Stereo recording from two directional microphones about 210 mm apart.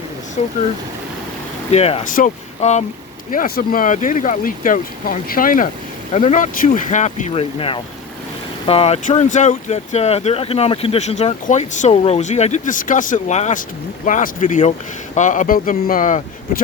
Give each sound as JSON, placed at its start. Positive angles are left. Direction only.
{"t": 0.4, "sound": "speech", "side_deg": 30}
{"t": 1.7, "sound": "speech", "side_deg": 30}
{"t": 3.3, "sound": "speech", "side_deg": 45}